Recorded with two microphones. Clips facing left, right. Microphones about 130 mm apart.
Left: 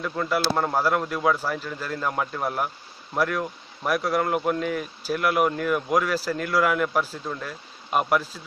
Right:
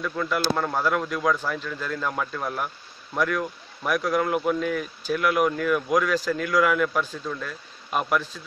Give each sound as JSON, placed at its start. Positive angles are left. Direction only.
{"t": 0.0, "sound": "a man's voice", "side_deg": 10}
{"t": 7.2, "sound": "speech", "side_deg": 15}
{"t": 7.9, "sound": "a man's voice", "side_deg": 5}